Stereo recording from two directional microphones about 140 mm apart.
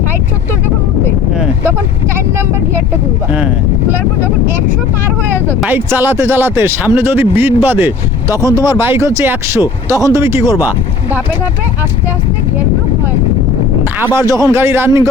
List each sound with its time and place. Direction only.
3.3 s speech: 10° right (ahead or behind)
14.0 s speech: 20° right (ahead or behind)